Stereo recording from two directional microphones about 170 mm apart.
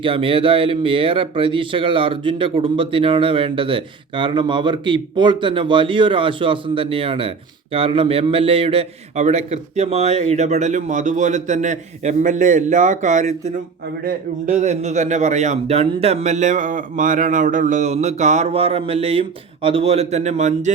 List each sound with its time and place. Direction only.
0.0 s speech: 30° right (ahead or behind)